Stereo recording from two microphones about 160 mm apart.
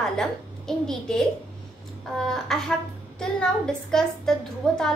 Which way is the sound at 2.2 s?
Centre (ahead or behind).